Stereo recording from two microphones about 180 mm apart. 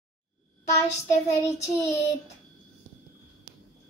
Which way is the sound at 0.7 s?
15° left (ahead or behind).